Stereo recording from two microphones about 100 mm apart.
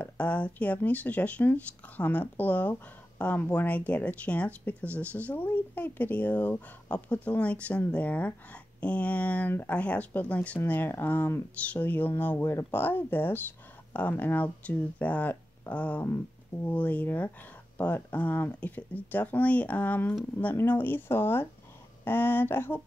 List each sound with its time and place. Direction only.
0.0 s speech: 15° left (ahead or behind)